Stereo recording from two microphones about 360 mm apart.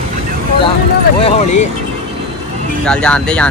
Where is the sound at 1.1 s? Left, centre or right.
Centre.